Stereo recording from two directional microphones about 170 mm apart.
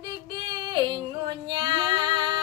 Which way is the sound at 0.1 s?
25° right (ahead or behind).